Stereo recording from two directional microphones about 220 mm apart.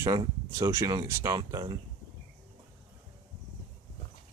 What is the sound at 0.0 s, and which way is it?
Speech, 15° right (ahead or behind).